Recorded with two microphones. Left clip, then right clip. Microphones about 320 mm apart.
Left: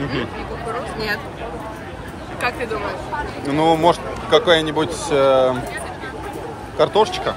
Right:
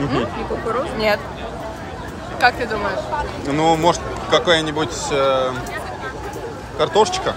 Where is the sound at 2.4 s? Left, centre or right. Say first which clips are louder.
Right 6 dB; right.